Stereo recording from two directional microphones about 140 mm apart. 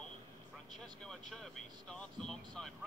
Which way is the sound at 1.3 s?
5° left (ahead or behind).